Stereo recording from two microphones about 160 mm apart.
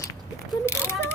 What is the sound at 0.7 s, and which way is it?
Mechanisms, 15° left (ahead or behind).